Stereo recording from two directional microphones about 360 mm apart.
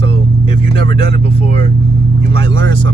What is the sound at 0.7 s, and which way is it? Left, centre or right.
Speech, centre.